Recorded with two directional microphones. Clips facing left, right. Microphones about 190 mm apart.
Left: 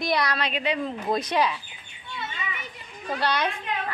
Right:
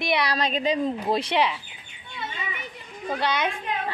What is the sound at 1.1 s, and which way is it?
Speech, 30° right (ahead or behind).